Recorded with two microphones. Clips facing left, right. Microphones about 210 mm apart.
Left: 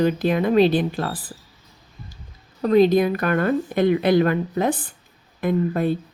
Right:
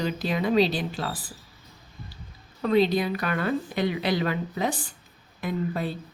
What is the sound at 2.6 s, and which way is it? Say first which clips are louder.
A woman's voice: left 6 dB; 45° left (ahead or behind).